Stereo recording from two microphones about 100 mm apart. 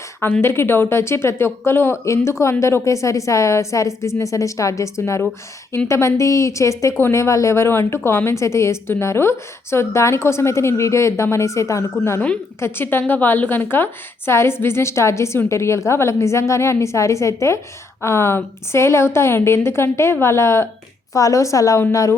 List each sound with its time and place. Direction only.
0.4 s a woman's voice: 25° left (ahead or behind)